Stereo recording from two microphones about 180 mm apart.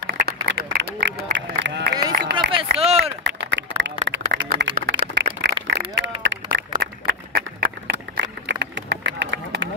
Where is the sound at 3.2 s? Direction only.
80° right.